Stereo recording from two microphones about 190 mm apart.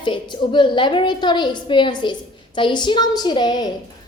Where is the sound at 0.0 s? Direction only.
25° left (ahead or behind).